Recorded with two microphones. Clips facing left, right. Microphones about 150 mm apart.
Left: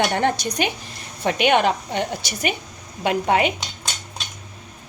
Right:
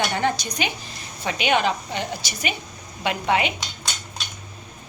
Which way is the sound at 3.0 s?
45° left (ahead or behind).